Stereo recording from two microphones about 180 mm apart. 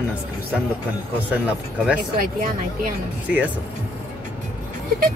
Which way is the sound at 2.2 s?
50° right (ahead or behind).